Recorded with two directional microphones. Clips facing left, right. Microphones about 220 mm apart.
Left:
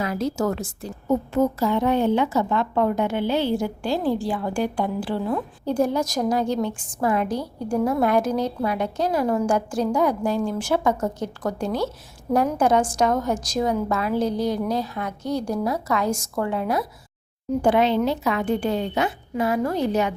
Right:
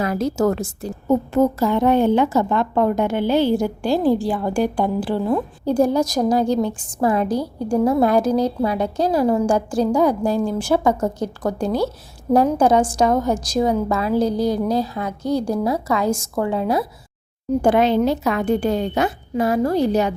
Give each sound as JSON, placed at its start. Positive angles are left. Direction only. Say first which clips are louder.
{"t": 0.0, "sound": "a woman's voice", "louder": "right 5 dB", "side_deg": -45}
{"t": 17.6, "sound": "a woman's voice", "louder": "right 3 dB", "side_deg": -45}